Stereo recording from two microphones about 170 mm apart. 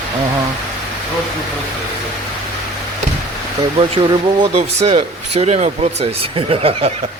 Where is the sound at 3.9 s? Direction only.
30° right (ahead or behind).